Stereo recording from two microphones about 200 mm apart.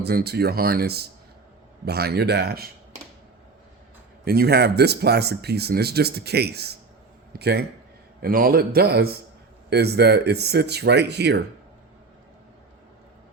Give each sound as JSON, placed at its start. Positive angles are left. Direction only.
{"t": 0.0, "sound": "speech", "side_deg": -50}
{"t": 4.3, "sound": "speech", "side_deg": -50}